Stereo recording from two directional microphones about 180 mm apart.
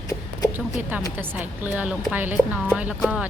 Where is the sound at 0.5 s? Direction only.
10° right (ahead or behind).